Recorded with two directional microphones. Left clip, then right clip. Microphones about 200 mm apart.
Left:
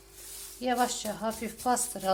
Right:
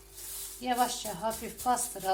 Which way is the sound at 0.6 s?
45° left (ahead or behind).